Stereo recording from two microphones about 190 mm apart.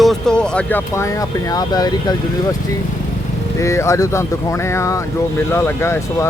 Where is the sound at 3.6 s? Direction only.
15° left (ahead or behind).